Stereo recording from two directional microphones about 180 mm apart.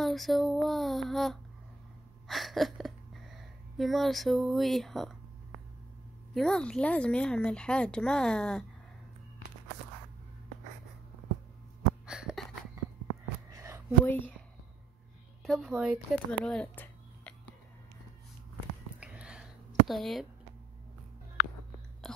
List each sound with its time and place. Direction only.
0.0 s a woman's voice: centre (ahead or behind)
6.3 s a woman's voice: 5° left (ahead or behind)
12.1 s a sound: 5° right (ahead or behind)
13.5 s a sound: 15° right (ahead or behind)
14.0 s speech: 10° left (ahead or behind)
15.4 s speech: centre (ahead or behind)
18.9 s a sound: 5° right (ahead or behind)
19.9 s a woman's voice: centre (ahead or behind)
22.0 s whispering: centre (ahead or behind)